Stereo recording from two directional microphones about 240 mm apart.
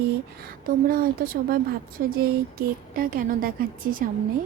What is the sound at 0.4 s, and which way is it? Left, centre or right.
A woman's voice, right.